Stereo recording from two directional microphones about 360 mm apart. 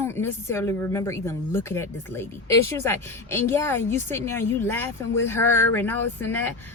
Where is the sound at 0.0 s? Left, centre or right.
Centre.